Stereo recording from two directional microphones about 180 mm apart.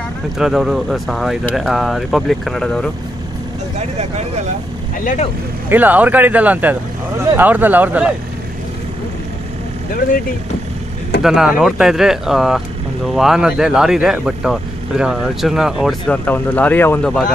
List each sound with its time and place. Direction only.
0.4 s speech: centre (ahead or behind)
5.0 s speech: 45° left (ahead or behind)
5.7 s speech: 10° right (ahead or behind)
11.2 s speech: 5° right (ahead or behind)